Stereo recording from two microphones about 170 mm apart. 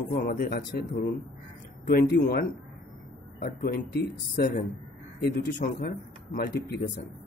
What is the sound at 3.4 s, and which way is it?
Speech, 70° left (ahead or behind).